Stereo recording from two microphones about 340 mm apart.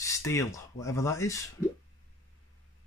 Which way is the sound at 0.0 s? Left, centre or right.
Centre.